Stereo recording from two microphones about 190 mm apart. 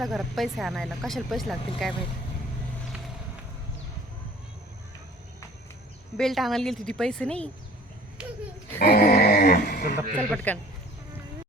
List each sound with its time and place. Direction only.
0.0 s speech: centre (ahead or behind)
6.1 s speech: centre (ahead or behind)
8.8 s a sound: 55° left (ahead or behind)
10.3 s speech: 10° left (ahead or behind)